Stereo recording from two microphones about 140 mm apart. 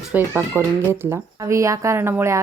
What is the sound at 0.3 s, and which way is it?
A woman's voice, 15° right (ahead or behind).